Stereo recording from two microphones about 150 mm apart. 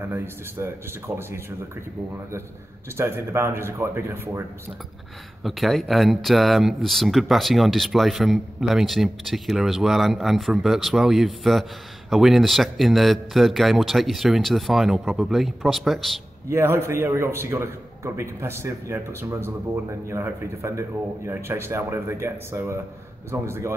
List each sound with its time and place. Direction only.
0.0 s a man's voice: 15° right (ahead or behind)
3.0 s a man's voice: 15° right (ahead or behind)
5.4 s speech: centre (ahead or behind)
16.4 s a man's voice: 15° right (ahead or behind)